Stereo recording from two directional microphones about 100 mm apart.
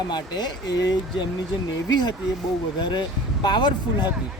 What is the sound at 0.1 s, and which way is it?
Speech, 45° left (ahead or behind).